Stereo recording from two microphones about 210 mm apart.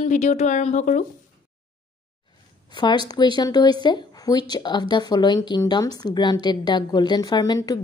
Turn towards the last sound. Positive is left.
turn(degrees=20)  # may be behind; listen again after turning